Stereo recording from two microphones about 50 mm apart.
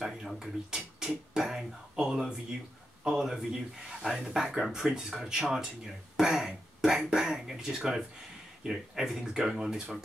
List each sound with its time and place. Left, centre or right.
0.0 s speech: centre